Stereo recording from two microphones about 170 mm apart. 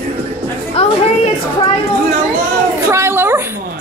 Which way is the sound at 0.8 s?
35° left (ahead or behind).